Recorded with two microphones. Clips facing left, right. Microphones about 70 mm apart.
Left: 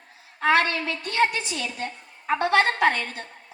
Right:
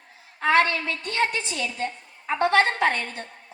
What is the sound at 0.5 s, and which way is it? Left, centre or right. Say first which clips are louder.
Speech: right 2 dB; right.